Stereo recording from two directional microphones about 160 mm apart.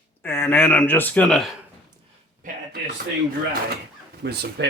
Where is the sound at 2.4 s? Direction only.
55° right (ahead or behind).